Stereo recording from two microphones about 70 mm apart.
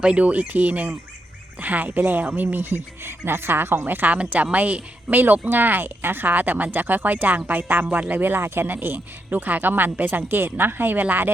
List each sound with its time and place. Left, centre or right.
0.0 s speech: centre